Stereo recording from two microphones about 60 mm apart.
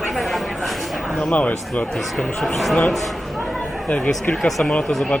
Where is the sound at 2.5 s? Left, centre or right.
Centre.